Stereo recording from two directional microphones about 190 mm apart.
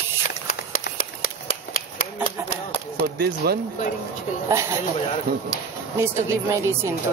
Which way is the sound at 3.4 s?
55° right (ahead or behind).